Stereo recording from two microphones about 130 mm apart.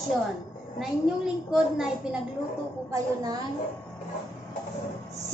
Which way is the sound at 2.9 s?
30° right (ahead or behind).